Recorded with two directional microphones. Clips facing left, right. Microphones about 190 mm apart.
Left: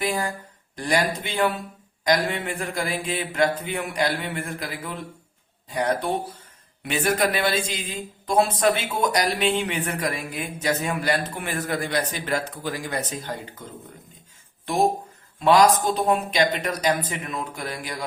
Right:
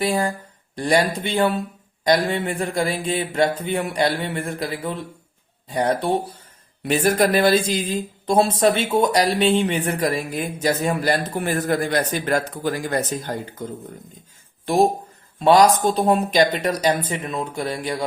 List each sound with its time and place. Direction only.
0.0 s speech: 30° right (ahead or behind); by 13.5 s 45° right (ahead or behind)
15.4 s speech: 35° right (ahead or behind)